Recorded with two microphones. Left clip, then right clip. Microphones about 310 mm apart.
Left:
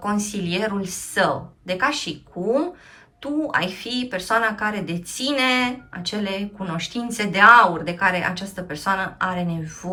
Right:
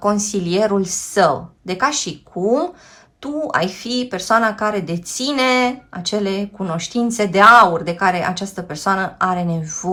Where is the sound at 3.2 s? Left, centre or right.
Centre.